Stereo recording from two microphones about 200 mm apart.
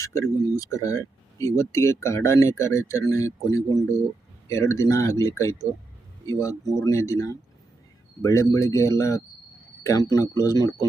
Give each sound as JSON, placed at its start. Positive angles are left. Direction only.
{"t": 0.0, "sound": "speech", "side_deg": 15}